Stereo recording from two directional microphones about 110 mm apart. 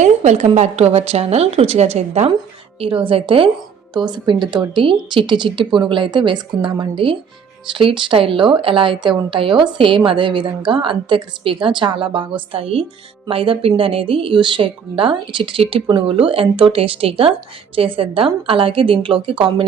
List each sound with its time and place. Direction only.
0.0 s a woman's voice: 90° right
2.8 s a woman's voice: 55° right (ahead or behind)
3.9 s a woman's voice: 40° right (ahead or behind)